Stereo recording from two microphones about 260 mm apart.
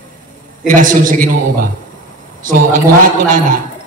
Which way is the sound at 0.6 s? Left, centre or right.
Right.